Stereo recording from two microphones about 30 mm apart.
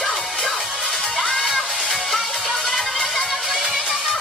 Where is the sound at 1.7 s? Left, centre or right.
Centre.